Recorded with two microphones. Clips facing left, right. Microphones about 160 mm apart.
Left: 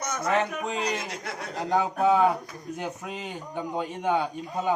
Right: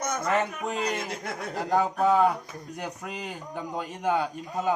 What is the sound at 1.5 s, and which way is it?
Speech, 5° right (ahead or behind).